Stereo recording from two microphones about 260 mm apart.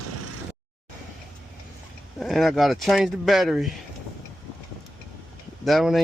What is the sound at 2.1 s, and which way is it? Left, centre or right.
Speech, centre.